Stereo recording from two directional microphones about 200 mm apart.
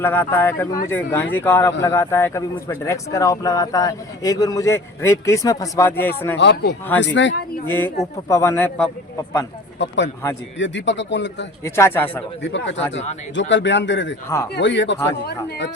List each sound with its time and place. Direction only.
0.0 s speech: 10° left (ahead or behind)
6.4 s a man's voice: 60° left (ahead or behind)
7.7 s speech: 10° left (ahead or behind)
9.7 s a man's voice: 60° left (ahead or behind)
11.6 s speech: 10° left (ahead or behind)
12.4 s a man's voice: 65° left (ahead or behind)